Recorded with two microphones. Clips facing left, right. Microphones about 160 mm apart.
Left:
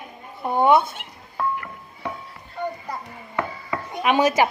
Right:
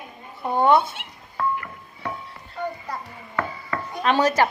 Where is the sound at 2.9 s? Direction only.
15° left (ahead or behind).